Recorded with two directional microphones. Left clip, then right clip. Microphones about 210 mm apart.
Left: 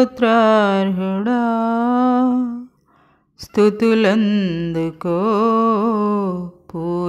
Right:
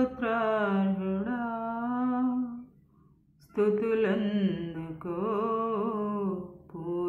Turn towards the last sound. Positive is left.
turn(degrees=40)  # may be behind; listen again after turning